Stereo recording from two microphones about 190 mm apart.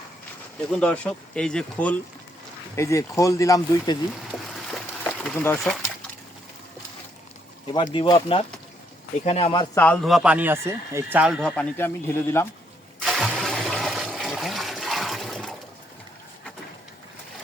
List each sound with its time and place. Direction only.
0.7 s speech: 5° left (ahead or behind)
5.3 s speech: 10° left (ahead or behind)
5.5 s speech: centre (ahead or behind)
7.9 s speech: 25° left (ahead or behind)
9.7 s speech: 10° left (ahead or behind)
13.0 s toilet flush: centre (ahead or behind)